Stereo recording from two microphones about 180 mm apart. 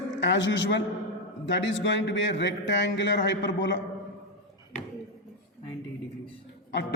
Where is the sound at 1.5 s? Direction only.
85° left.